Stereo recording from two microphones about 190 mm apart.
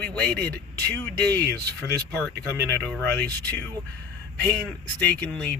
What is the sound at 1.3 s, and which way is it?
Speech, 60° right (ahead or behind).